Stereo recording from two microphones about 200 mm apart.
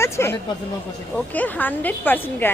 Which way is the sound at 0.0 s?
10° left (ahead or behind).